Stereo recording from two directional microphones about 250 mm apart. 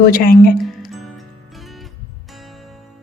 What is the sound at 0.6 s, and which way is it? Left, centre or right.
Music, centre.